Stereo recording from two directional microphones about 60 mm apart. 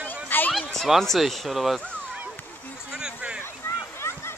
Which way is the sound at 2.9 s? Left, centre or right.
Centre.